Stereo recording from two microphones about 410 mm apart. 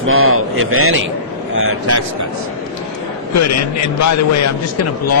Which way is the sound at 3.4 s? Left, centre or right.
Left.